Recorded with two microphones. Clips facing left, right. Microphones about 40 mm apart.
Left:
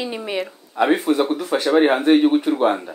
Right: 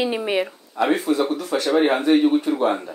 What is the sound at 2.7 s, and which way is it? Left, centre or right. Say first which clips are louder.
Speech: left 2 dB; centre.